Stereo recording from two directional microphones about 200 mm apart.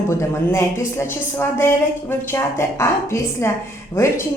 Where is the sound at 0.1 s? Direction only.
15° left (ahead or behind).